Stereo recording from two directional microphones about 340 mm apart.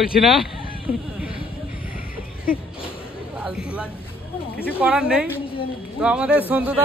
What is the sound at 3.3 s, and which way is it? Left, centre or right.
A woman's voice, centre.